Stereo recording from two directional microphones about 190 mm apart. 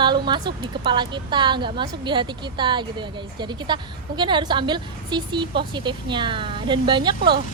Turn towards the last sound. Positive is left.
turn(degrees=-25)  # may be behind; listen again after turning